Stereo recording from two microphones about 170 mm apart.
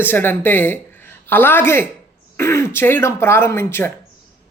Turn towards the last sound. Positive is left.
turn(degrees=15)  # may be behind; listen again after turning